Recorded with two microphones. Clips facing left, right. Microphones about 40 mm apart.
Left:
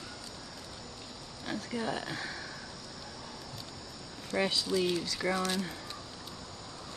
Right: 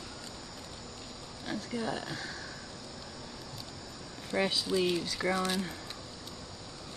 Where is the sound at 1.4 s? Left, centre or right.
Centre.